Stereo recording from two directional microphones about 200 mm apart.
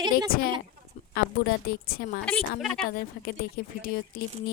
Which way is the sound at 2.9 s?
45° left (ahead or behind).